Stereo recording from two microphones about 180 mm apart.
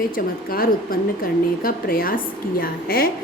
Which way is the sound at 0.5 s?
55° left (ahead or behind).